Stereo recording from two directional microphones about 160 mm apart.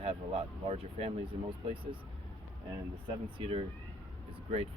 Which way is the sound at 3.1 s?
35° right (ahead or behind).